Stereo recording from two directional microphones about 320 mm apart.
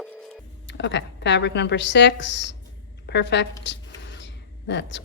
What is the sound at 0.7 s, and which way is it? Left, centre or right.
A woman's voice, left.